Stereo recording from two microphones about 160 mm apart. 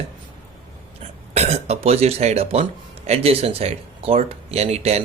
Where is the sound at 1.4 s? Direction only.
40° right (ahead or behind).